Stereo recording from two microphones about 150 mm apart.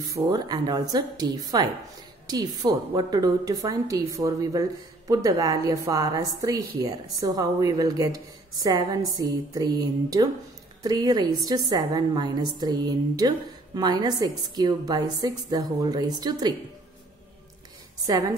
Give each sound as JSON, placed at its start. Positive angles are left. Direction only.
{"t": 0.0, "sound": "a woman's voice", "side_deg": -25}
{"t": 18.0, "sound": "a woman's voice", "side_deg": -25}